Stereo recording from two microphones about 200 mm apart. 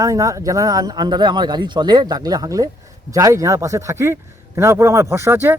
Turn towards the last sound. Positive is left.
turn(degrees=-10)  # may be behind; listen again after turning